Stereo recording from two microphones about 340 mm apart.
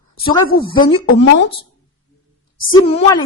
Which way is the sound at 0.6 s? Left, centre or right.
Centre.